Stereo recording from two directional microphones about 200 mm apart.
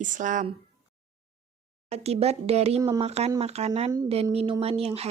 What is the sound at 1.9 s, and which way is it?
A woman's voice, 30° right (ahead or behind).